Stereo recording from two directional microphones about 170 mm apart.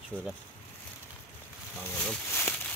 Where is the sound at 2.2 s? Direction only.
10° left (ahead or behind).